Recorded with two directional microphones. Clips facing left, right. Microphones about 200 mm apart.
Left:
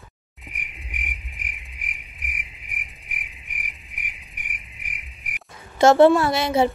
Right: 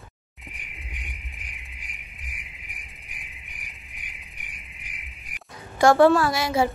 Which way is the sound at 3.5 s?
20° left (ahead or behind).